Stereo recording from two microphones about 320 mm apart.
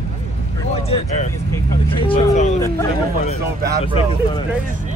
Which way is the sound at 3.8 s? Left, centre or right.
Centre.